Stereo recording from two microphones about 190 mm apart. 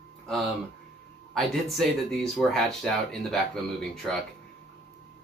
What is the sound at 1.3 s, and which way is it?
Speech, centre (ahead or behind).